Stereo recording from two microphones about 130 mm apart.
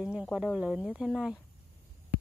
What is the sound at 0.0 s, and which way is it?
Speech, 10° right (ahead or behind).